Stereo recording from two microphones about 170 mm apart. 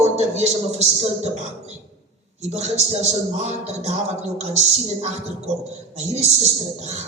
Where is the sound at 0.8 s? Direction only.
40° right (ahead or behind).